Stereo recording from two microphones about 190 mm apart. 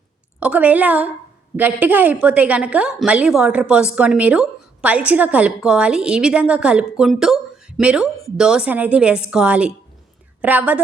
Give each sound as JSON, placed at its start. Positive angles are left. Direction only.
{"t": 0.3, "sound": "a woman's voice", "side_deg": -5}